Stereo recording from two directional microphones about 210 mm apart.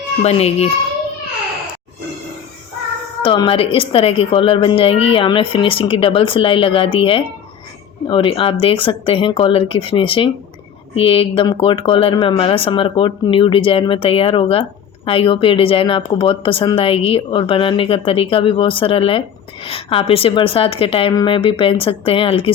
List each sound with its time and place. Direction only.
0.2 s speech: 30° left (ahead or behind)
3.2 s speech: 25° left (ahead or behind)